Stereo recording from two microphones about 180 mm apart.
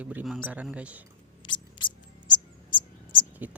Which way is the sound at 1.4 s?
25° left (ahead or behind).